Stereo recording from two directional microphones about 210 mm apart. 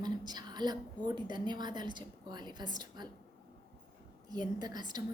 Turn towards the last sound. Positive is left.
turn(degrees=-20)  # may be behind; listen again after turning